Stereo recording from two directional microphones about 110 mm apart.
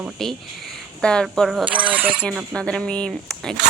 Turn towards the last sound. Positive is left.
turn(degrees=5)  # may be behind; listen again after turning